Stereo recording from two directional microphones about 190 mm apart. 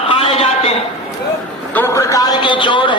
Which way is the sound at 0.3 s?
30° left (ahead or behind).